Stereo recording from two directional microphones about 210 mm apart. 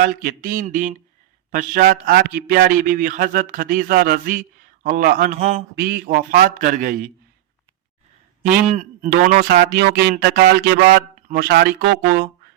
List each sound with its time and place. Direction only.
0.0 s a man's voice: 45° right (ahead or behind)
5.7 s speech: 45° right (ahead or behind)
8.6 s a man's voice: 35° right (ahead or behind); by 12.3 s 50° right (ahead or behind)